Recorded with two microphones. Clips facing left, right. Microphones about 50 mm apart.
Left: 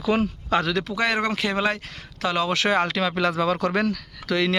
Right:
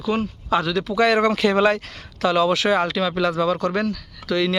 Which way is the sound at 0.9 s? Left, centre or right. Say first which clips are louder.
Right 6 dB; left.